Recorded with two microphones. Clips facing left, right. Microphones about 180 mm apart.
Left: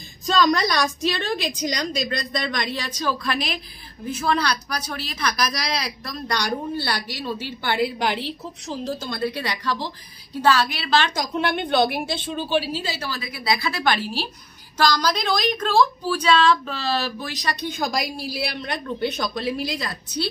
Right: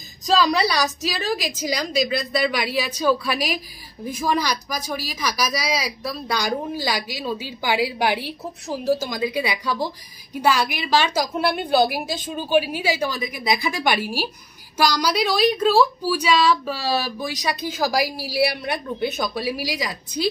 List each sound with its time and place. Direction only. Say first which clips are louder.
0.3 s speech: right 1 dB; 5° right (ahead or behind)
17.8 s a woman's voice: right 5 dB; 70° right (ahead or behind)
18.5 s speech: right 2 dB; 10° right (ahead or behind)